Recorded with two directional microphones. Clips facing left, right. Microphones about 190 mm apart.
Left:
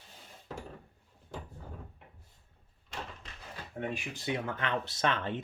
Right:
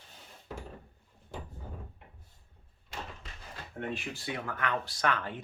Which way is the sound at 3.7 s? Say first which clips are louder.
Even; 15° left (ahead or behind).